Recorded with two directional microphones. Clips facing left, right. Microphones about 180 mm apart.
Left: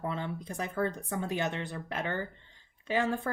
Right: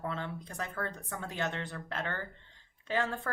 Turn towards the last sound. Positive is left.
turn(degrees=15)  # may be behind; listen again after turning